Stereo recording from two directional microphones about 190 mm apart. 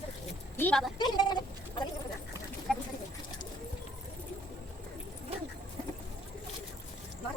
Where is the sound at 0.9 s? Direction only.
20° left (ahead or behind).